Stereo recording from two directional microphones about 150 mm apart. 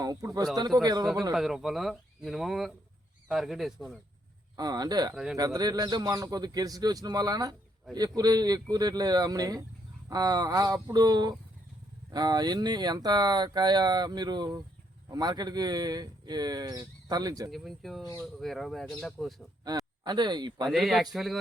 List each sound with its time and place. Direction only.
0.0 s speech: 25° right (ahead or behind)
1.3 s speech: centre (ahead or behind)
4.5 s speech: 25° right (ahead or behind)
5.1 s speech: centre (ahead or behind)
5.4 s speech: 25° right (ahead or behind)
17.5 s speech: centre (ahead or behind)
19.6 s a man's voice: 25° right (ahead or behind)
20.7 s speech: centre (ahead or behind)